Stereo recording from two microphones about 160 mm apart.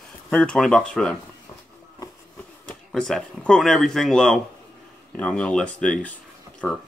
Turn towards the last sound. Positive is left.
turn(degrees=10)  # may be behind; listen again after turning